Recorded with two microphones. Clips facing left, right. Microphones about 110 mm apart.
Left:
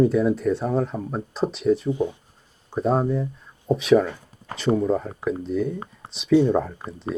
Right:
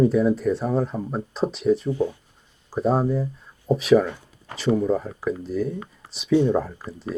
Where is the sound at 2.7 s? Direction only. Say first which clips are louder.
Even; centre (ahead or behind).